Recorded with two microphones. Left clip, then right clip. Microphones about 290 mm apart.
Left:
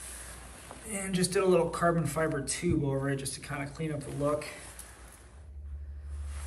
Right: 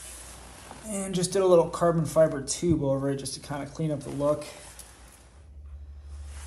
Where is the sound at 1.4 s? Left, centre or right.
Centre.